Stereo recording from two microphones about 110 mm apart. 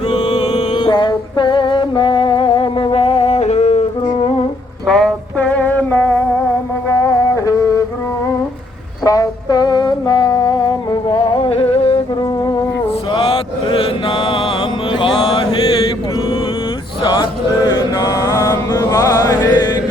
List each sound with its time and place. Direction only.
0.5 s music: 40° left (ahead or behind); by 3.8 s 85° left
4.9 s a sound: 5° left (ahead or behind)
6.8 s music: 30° left (ahead or behind)
9.0 s a sound: 35° left (ahead or behind); by 12.0 s 60° left (ahead or behind)
13.1 s mantra: 55° left (ahead or behind)
17.0 s mantra: 40° left (ahead or behind)
19.5 s chant: 40° left (ahead or behind)